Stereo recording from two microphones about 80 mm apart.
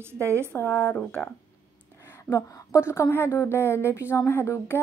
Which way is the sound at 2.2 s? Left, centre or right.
Left.